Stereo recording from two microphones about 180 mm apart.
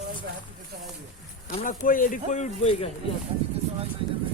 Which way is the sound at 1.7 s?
50° left (ahead or behind).